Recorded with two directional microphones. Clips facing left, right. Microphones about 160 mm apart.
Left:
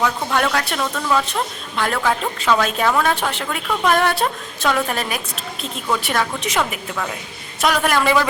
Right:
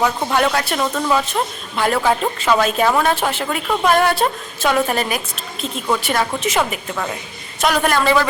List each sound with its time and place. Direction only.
0.0 s a woman's voice: 15° right (ahead or behind)
0.9 s a woman's voice: 15° right (ahead or behind)
1.3 s a woman's voice: 5° right (ahead or behind)